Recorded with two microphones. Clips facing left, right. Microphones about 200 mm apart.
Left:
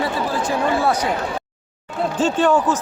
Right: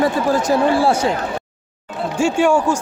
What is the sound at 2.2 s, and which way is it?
Speech, 10° right (ahead or behind).